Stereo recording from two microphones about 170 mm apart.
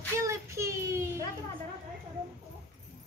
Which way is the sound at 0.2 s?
15° right (ahead or behind).